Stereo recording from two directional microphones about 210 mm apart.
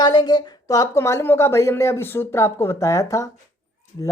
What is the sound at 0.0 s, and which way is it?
Speech, 20° left (ahead or behind).